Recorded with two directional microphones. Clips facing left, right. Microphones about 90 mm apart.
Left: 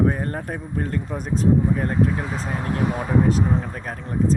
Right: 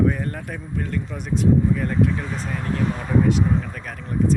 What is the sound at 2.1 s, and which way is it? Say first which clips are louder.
Speech: left 1 dB; 15° left (ahead or behind).